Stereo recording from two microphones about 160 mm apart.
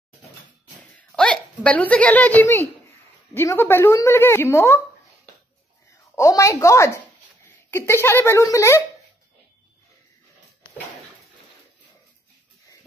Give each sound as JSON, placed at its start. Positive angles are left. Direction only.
{"t": 0.7, "sound": "a sound", "side_deg": 5}
{"t": 3.3, "sound": "a woman's voice", "side_deg": 15}
{"t": 6.1, "sound": "a woman's voice", "side_deg": 20}